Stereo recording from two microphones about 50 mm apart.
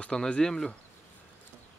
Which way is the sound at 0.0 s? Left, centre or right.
Centre.